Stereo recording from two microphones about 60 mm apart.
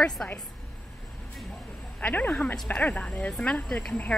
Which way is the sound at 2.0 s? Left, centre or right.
Left.